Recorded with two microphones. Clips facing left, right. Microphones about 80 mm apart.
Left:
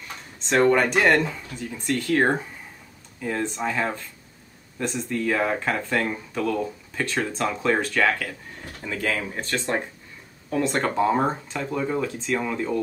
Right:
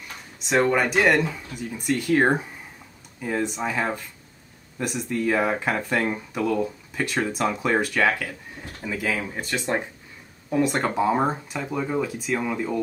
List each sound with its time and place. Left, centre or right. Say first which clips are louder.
0.4 s speech: left 2 dB; centre